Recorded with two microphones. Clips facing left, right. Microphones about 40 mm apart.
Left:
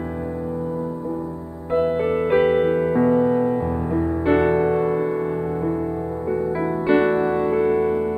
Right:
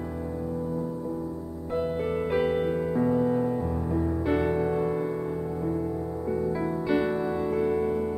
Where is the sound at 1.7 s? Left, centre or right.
Left.